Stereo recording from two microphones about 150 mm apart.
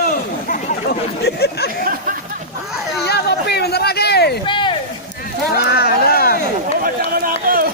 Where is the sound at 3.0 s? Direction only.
90° left.